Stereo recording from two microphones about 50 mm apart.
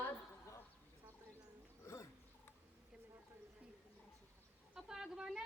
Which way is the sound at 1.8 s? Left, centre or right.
Left.